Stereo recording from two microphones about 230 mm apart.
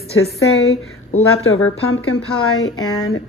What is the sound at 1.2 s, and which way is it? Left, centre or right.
Speech, left.